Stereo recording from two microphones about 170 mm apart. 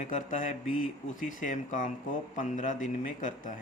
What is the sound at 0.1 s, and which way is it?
A man's voice, 45° left (ahead or behind).